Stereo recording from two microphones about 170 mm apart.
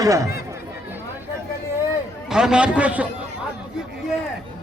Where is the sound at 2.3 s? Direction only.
5° right (ahead or behind).